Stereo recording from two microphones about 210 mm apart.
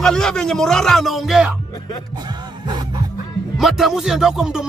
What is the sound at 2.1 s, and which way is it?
Music, 20° right (ahead or behind).